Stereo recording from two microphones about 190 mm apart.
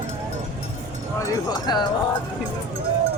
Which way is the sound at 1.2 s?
20° left (ahead or behind).